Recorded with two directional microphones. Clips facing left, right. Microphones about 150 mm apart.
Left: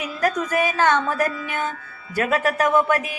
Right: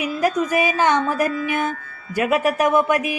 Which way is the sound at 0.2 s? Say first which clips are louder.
Right 1 dB; 10° right (ahead or behind).